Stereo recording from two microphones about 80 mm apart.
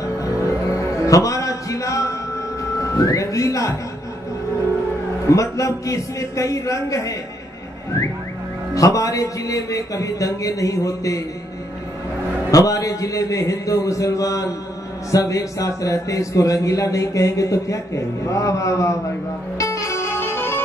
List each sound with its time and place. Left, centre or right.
0.2 s music: left
5.3 s a man's voice: left
8.7 s speech: left
12.4 s speech: left
19.6 s music: left